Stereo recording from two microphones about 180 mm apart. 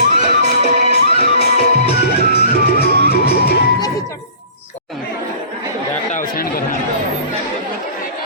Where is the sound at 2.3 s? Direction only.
60° left (ahead or behind).